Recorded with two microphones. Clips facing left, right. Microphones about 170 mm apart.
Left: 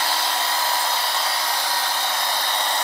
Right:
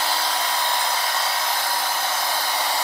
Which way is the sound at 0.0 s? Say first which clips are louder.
Even; centre (ahead or behind).